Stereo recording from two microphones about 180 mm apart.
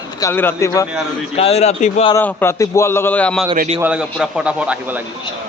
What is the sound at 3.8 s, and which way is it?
A man's voice, 5° right (ahead or behind).